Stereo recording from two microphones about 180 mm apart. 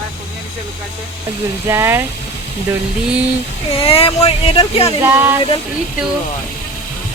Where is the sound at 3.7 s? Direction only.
30° left (ahead or behind).